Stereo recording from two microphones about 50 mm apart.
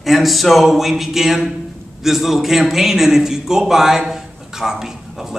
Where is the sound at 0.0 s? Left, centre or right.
Centre.